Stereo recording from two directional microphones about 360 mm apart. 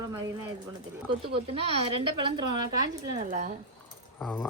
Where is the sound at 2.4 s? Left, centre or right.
Right.